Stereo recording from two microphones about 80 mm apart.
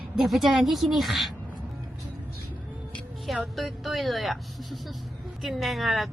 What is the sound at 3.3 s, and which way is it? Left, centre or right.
A woman's voice, centre.